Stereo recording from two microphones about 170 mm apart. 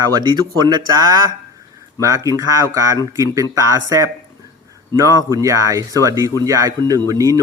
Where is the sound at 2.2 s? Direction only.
20° right (ahead or behind).